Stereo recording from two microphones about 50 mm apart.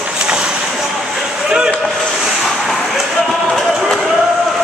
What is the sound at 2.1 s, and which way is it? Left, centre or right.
Vehicle, centre.